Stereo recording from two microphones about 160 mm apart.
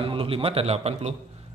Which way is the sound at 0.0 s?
35° right (ahead or behind).